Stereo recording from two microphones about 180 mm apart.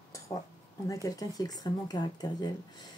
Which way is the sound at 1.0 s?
20° left (ahead or behind).